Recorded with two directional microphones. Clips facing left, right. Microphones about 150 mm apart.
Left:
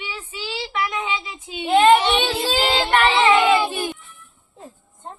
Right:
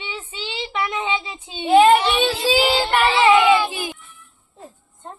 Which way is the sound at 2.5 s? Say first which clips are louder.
Right 1 dB; 10° right (ahead or behind).